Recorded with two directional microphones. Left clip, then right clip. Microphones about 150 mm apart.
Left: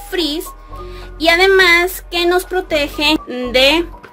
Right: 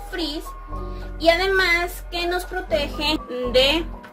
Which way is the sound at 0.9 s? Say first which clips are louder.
Left 5 dB; 90° left.